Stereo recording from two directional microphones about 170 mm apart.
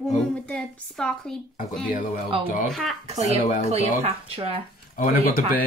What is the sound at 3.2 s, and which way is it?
Speech, 45° left (ahead or behind).